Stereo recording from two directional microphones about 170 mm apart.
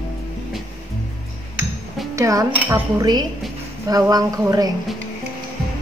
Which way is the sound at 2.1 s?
20° right (ahead or behind).